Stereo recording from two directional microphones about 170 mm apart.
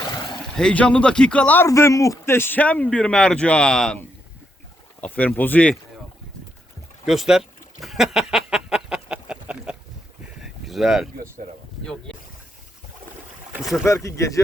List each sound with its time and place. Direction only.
0.5 s a man's voice: 5° left (ahead or behind)
7.0 s a sound: centre (ahead or behind)
13.5 s speech: centre (ahead or behind)
13.8 s a man's voice: 15° left (ahead or behind)